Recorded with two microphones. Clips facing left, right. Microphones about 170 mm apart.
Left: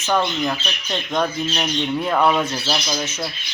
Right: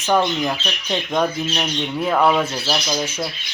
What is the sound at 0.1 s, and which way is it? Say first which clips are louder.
Speech: right 2 dB; 10° right (ahead or behind).